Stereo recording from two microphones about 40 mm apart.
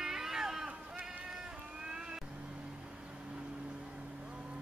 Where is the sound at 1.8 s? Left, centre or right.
Centre.